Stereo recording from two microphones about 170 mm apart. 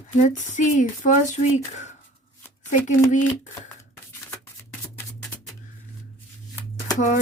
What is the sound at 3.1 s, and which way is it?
Speech, 45° left (ahead or behind).